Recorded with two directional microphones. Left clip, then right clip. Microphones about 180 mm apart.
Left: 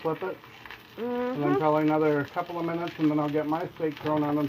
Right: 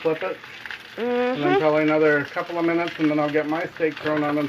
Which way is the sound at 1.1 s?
15° right (ahead or behind).